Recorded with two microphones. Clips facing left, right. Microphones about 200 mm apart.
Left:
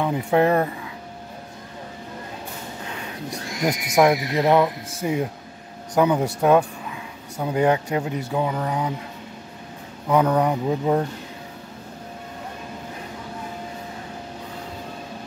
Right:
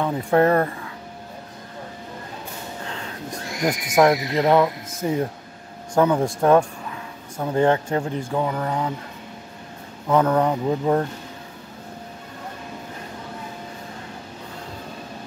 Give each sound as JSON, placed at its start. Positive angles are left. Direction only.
{"t": 0.0, "sound": "a man's voice", "side_deg": 10}
{"t": 2.9, "sound": "a sound", "side_deg": 15}
{"t": 3.9, "sound": "a man's voice", "side_deg": 10}
{"t": 10.1, "sound": "a man's voice", "side_deg": 10}